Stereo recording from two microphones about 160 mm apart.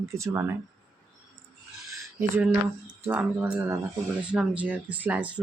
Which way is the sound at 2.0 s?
15° right (ahead or behind).